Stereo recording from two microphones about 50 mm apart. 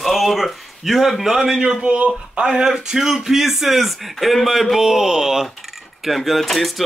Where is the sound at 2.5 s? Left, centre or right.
Centre.